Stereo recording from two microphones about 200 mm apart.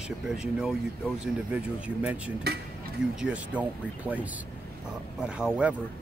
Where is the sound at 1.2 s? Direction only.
5° right (ahead or behind).